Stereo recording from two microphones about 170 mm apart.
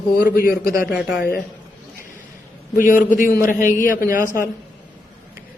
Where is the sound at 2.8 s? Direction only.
50° left (ahead or behind).